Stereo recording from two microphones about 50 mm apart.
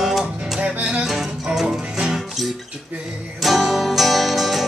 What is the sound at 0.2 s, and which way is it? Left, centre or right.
Music, right.